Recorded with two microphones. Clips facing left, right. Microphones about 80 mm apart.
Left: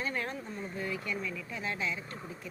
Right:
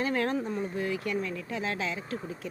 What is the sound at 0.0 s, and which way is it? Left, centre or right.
Speech, right.